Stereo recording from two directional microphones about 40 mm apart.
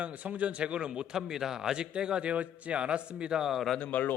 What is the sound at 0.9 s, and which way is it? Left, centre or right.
A man's voice, centre.